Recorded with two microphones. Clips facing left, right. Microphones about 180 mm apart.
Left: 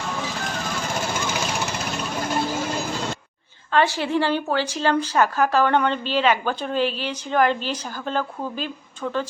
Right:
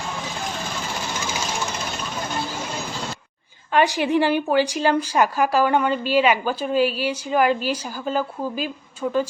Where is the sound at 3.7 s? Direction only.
15° right (ahead or behind).